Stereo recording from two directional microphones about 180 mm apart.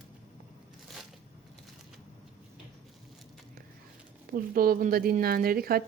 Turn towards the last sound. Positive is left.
turn(degrees=-55)  # may be behind; listen again after turning